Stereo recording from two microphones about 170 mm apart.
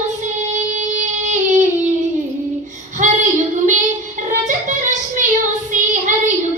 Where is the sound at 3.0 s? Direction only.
45° right (ahead or behind).